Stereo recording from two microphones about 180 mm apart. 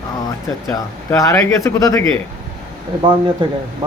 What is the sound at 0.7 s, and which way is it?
Speech, 15° left (ahead or behind).